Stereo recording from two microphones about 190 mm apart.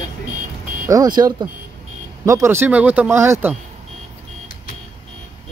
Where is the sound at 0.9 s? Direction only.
20° right (ahead or behind).